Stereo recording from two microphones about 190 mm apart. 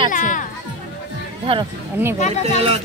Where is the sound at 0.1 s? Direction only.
45° left (ahead or behind).